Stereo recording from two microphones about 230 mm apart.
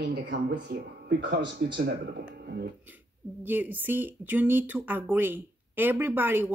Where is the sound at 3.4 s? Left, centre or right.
Centre.